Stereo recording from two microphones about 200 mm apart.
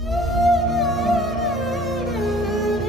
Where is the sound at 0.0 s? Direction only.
Centre (ahead or behind).